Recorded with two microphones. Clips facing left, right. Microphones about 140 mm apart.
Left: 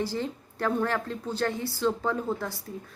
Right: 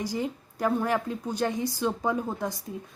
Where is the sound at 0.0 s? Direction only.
15° right (ahead or behind).